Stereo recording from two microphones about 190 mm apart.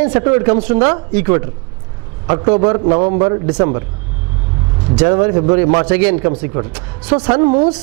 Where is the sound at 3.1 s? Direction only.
25° right (ahead or behind).